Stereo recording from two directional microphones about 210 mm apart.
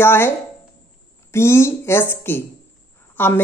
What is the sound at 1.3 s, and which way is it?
A woman's voice, 10° left (ahead or behind).